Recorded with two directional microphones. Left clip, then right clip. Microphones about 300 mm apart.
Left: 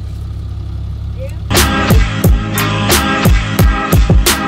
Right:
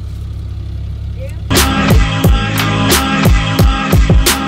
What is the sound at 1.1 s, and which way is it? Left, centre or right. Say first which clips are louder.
Music: even; centre.